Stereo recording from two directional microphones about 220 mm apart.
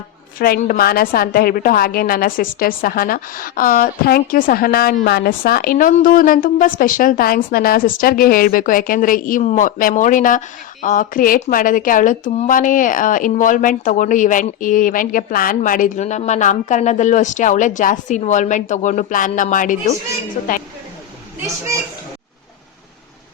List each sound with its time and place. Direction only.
0.3 s speech: 40° left (ahead or behind)